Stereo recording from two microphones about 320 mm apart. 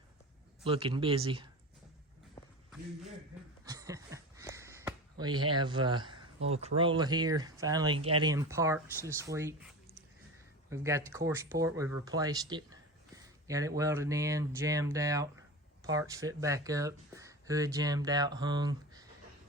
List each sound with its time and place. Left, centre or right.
0.6 s speech: centre
3.7 s a sound: centre
5.5 s speech: centre
10.7 s speech: centre